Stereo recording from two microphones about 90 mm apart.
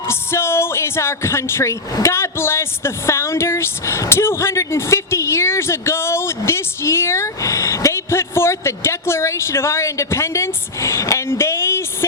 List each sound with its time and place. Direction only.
0.1 s speech: 30° left (ahead or behind)